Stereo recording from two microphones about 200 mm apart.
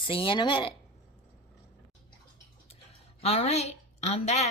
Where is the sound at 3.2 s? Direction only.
30° left (ahead or behind).